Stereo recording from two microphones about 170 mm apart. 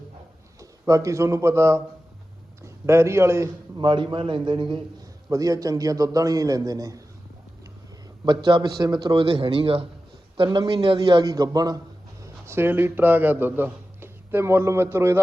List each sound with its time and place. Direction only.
0.6 s a man's voice: 20° right (ahead or behind)
3.8 s a man's voice: 30° right (ahead or behind)
8.2 s a man's voice: 25° right (ahead or behind)